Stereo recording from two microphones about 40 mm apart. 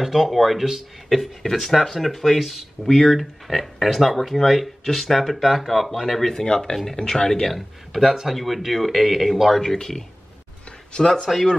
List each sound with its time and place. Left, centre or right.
0.0 s speech: centre
9.6 s speech: centre